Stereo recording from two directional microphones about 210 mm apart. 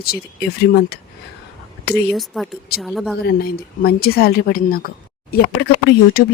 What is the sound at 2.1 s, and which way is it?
Speech, centre (ahead or behind).